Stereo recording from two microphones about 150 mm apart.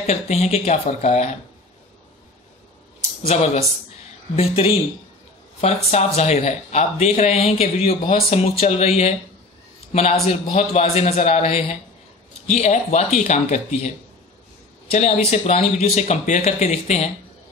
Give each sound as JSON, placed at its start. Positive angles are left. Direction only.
{"t": 0.0, "sound": "speech", "side_deg": 45}
{"t": 3.3, "sound": "speech", "side_deg": 45}